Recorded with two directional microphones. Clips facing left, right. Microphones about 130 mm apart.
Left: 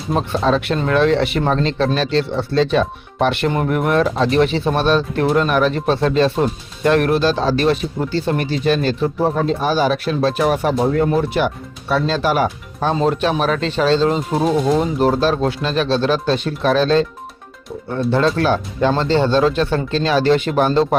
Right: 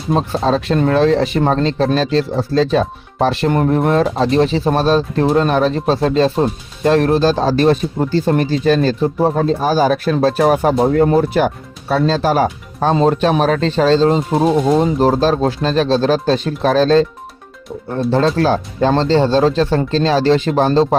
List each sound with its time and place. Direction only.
0.2 s speech: 30° right (ahead or behind)
14.3 s speech: centre (ahead or behind)
14.8 s speech: 35° right (ahead or behind)
18.1 s speech: 35° right (ahead or behind)